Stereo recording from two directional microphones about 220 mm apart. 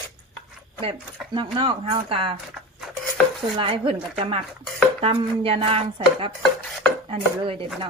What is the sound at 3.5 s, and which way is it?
Speech, 25° right (ahead or behind).